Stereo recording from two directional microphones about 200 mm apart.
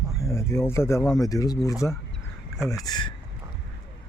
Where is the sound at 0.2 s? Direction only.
15° left (ahead or behind).